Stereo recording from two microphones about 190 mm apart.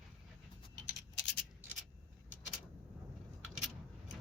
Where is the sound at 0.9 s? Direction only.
70° left (ahead or behind).